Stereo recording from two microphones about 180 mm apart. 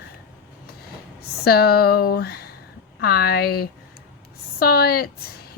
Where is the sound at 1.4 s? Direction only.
60° left (ahead or behind).